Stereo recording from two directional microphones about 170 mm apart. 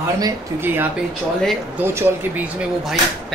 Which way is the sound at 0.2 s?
15° right (ahead or behind).